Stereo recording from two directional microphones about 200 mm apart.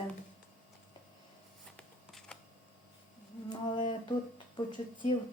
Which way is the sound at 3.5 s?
20° left (ahead or behind).